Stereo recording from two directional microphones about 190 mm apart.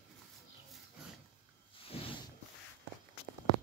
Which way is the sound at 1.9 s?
30° left (ahead or behind).